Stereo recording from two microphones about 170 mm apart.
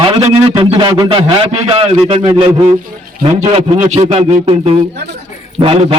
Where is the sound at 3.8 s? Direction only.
35° right (ahead or behind).